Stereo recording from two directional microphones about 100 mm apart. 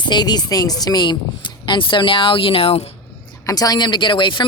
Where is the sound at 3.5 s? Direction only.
40° left (ahead or behind).